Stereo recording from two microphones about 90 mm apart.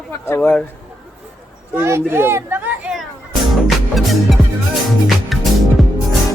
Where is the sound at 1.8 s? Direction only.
30° right (ahead or behind).